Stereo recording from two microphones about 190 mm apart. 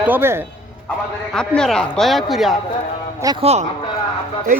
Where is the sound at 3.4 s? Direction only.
35° right (ahead or behind).